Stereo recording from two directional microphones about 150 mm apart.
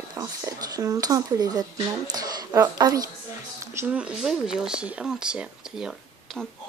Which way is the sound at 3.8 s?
10° right (ahead or behind).